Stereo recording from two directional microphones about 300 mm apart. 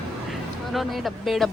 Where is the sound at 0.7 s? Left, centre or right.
Centre.